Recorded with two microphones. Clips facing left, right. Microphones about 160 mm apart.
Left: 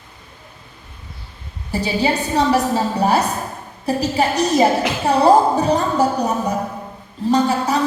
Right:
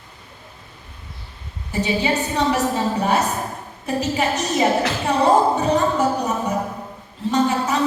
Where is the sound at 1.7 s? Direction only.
35° left (ahead or behind).